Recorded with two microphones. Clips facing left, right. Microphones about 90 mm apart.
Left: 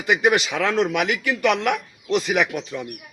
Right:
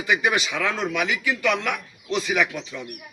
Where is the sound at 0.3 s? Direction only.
55° left (ahead or behind).